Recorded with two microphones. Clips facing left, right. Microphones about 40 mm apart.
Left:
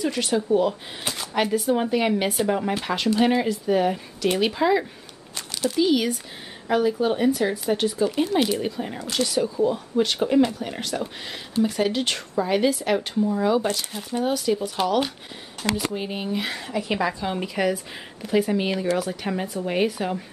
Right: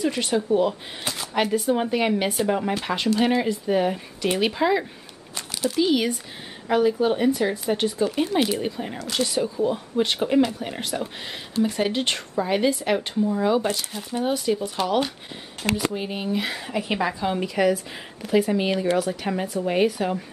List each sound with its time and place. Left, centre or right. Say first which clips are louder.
0.0 s speech: even; centre
5.3 s crumpling: even; centre
6.7 s speech: right 1 dB; centre
10.9 s speech: even; centre
11.6 s speech: even; centre
15.9 s speech: right 1 dB; centre
16.7 s speech: left 1 dB; centre
17.3 s speech: right 3 dB; centre